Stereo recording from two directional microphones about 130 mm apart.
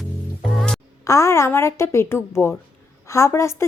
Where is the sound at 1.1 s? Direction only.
25° left (ahead or behind).